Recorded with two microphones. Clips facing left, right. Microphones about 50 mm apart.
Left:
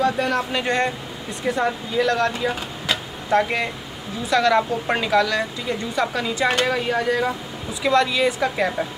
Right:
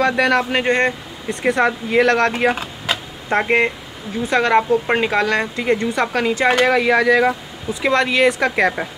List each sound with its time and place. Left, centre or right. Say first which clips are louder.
0.0 s speech: right 5 dB; right
0.4 s speech: right 5 dB; right
1.4 s speech: right 5 dB; right
2.9 s a sound: even; right
4.3 s speech: right 3 dB; right
5.1 s speech: right 1 dB; right
6.6 s speech: right 7 dB; right
7.8 s speech: right 3 dB; right